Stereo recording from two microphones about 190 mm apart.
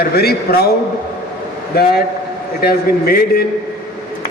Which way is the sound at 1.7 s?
55° left (ahead or behind).